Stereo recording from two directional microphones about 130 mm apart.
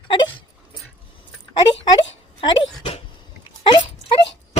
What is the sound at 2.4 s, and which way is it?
Speech, 40° left (ahead or behind).